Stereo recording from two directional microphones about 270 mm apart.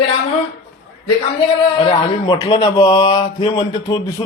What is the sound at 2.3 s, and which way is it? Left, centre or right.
A man's voice, centre.